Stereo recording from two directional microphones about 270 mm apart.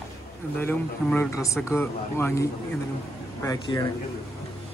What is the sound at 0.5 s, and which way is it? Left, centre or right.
Speech, centre.